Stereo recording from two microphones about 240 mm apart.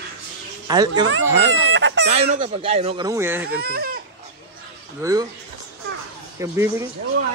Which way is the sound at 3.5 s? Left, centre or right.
Right.